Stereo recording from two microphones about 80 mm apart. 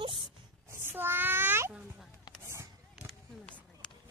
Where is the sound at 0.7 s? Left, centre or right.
Right.